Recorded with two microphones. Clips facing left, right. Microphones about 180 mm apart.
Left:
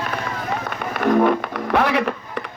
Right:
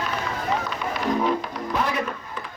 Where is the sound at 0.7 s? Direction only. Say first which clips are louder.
Left 6 dB; 55° left (ahead or behind); by 2.5 s 70° left (ahead or behind).